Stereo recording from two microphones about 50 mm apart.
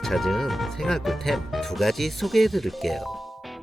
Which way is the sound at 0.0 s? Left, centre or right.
Centre.